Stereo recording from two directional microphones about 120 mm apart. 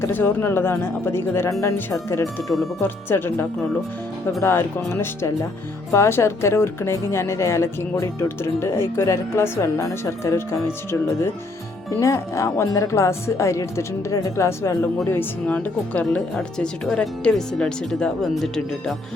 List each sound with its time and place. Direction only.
0.0 s speech: 15° left (ahead or behind)
2.2 s speech: centre (ahead or behind)
2.8 s speech: 20° left (ahead or behind)
11.9 s speech: 25° left (ahead or behind); by 18.9 s 5° left (ahead or behind)